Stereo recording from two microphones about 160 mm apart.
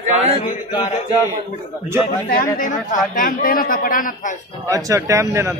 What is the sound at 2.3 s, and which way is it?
A man's voice, 55° left (ahead or behind).